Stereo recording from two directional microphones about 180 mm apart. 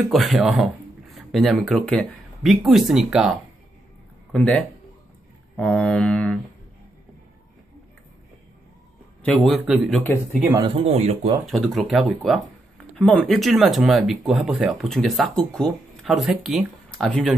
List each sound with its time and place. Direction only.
0.1 s speech: centre (ahead or behind)
9.2 s speech: centre (ahead or behind)
10.8 s speech: 35° right (ahead or behind)
11.4 s speech: centre (ahead or behind)